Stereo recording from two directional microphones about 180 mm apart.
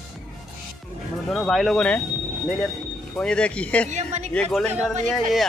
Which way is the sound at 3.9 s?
40° right (ahead or behind).